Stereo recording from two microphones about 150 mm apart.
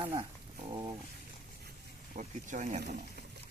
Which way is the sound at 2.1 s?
60° right (ahead or behind).